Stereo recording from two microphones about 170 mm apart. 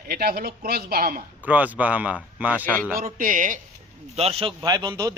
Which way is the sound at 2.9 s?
50° right (ahead or behind).